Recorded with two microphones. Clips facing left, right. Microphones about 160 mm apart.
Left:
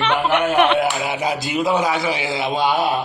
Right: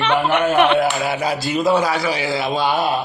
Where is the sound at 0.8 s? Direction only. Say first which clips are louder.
Right 1 dB; 20° left (ahead or behind).